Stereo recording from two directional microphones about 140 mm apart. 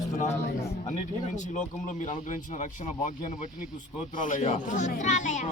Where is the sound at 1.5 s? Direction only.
65° left (ahead or behind).